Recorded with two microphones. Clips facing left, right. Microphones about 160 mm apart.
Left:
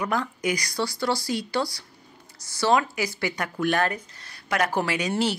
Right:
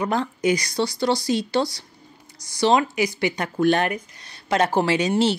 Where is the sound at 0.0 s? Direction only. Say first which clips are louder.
Right 4 dB; 25° right (ahead or behind).